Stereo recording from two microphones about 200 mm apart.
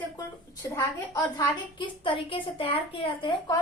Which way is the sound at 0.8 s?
15° left (ahead or behind).